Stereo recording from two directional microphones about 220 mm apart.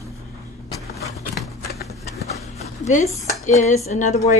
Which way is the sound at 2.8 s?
30° left (ahead or behind).